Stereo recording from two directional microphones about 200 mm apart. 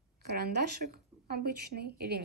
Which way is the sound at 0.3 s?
55° right (ahead or behind).